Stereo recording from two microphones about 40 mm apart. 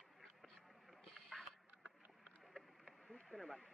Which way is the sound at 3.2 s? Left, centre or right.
Centre.